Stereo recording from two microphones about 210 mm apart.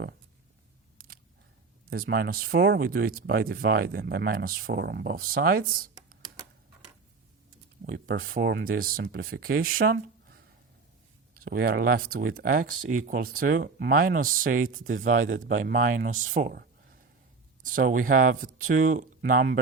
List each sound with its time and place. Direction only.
0.9 s single-lens reflex camera: 45° right (ahead or behind)
1.9 s speech: 45° right (ahead or behind)
7.9 s speech: 40° right (ahead or behind)
15.2 s a man's voice: 65° right (ahead or behind)
15.6 s speech: 40° right (ahead or behind)